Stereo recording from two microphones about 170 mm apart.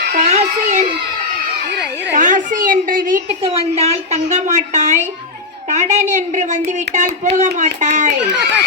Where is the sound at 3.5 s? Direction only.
40° right (ahead or behind).